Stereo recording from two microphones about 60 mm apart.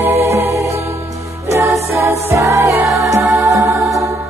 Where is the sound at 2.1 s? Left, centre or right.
Right.